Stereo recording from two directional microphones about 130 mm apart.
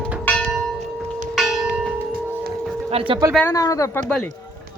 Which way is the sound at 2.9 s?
50° right (ahead or behind).